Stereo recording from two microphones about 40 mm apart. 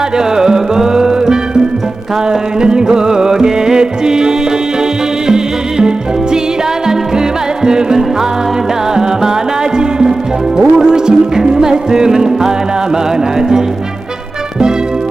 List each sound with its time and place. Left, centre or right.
0.2 s music: centre
7.6 s music: centre
9.7 s music: centre